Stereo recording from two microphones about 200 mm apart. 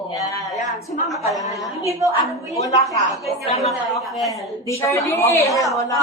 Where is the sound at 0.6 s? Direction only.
35° left (ahead or behind).